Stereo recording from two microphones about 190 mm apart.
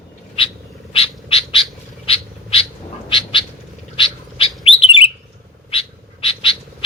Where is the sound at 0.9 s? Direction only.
30° left (ahead or behind).